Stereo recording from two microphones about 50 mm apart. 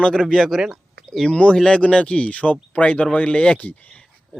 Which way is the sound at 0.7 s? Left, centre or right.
Centre.